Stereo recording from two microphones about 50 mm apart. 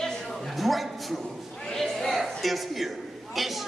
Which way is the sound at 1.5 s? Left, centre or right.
Centre.